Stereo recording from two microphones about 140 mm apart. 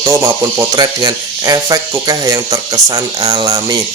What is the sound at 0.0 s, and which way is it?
Speech, 20° right (ahead or behind).